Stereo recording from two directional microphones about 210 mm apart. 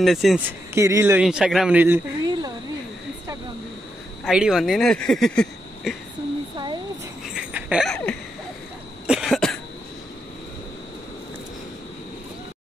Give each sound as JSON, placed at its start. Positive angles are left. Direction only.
{"t": 0.0, "sound": "speech", "side_deg": 0}
{"t": 0.7, "sound": "a man's voice", "side_deg": -15}
{"t": 4.2, "sound": "speech", "side_deg": 0}
{"t": 6.5, "sound": "a sound", "side_deg": -20}
{"t": 7.3, "sound": "a sound", "side_deg": -5}
{"t": 9.0, "sound": "cough", "side_deg": -5}